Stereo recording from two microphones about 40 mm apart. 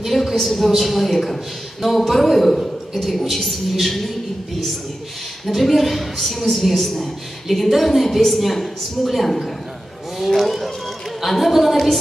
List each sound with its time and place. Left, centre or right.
0.0 s a woman's voice: centre
5.5 s a woman's voice: centre